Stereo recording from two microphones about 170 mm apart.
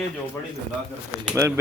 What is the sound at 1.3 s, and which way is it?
Speech, 15° right (ahead or behind).